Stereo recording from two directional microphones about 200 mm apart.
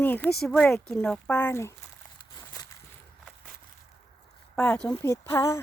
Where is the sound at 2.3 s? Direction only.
20° left (ahead or behind).